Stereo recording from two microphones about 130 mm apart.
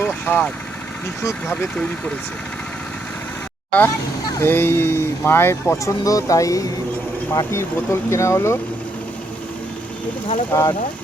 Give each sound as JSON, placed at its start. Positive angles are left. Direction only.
{"t": 0.1, "sound": "speech", "side_deg": 5}
{"t": 3.7, "sound": "speech", "side_deg": 10}
{"t": 10.5, "sound": "speech", "side_deg": 25}